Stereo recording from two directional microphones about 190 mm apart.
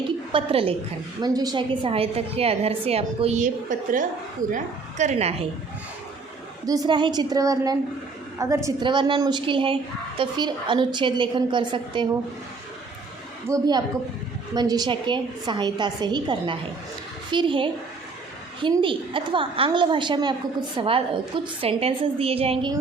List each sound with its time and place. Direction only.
0.3 s a woman's voice: 30° right (ahead or behind)
6.7 s a woman's voice: 20° right (ahead or behind)
13.5 s a woman's voice: 20° right (ahead or behind)